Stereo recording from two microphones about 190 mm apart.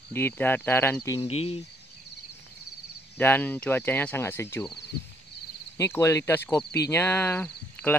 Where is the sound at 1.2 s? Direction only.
30° left (ahead or behind).